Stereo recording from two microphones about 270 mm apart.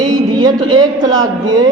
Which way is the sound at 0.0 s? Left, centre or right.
Centre.